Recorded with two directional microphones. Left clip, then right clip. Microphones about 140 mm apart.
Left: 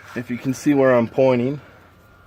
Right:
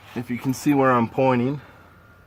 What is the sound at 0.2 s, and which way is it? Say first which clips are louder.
Speech: left 1 dB; 25° right (ahead or behind).